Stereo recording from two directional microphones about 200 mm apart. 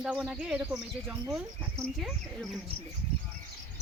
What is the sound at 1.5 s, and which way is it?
Speech, 5° left (ahead or behind).